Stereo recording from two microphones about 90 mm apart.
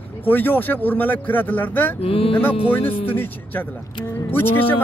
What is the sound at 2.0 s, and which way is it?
Speech, 90° left.